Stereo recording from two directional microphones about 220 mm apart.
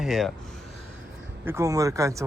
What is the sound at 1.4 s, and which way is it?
Speech, 15° right (ahead or behind).